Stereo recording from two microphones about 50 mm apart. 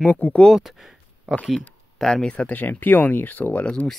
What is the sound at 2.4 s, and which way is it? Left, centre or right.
Speech, left.